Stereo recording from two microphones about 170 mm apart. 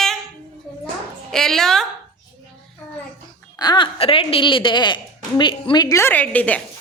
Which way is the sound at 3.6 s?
25° left (ahead or behind).